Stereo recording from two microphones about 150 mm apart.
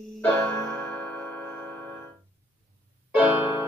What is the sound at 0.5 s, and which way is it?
Music, 15° left (ahead or behind).